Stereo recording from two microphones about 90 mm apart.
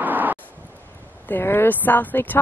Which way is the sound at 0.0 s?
20° right (ahead or behind).